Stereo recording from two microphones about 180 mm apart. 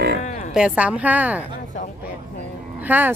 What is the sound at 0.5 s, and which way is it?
Speech, 5° right (ahead or behind).